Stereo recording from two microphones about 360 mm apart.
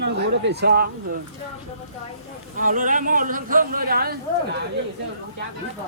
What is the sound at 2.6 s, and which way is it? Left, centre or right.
Speech, right.